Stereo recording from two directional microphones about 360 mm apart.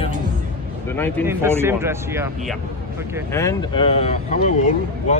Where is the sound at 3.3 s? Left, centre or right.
Centre.